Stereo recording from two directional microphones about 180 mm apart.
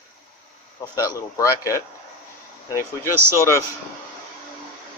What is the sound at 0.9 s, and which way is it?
Speech, 15° left (ahead or behind).